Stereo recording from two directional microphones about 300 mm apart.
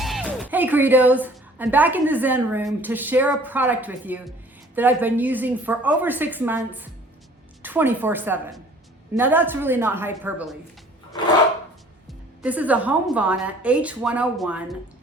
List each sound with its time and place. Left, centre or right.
0.0 s a woman's voice: centre
12.4 s a woman's voice: centre